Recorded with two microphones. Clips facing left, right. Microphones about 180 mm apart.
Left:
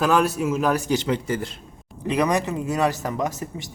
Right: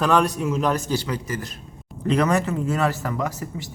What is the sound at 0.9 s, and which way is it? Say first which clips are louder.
Speech: left 3 dB; 25° left (ahead or behind).